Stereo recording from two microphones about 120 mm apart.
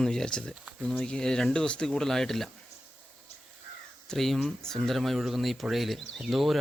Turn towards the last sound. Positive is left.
turn(degrees=0)  # may be behind; listen again after turning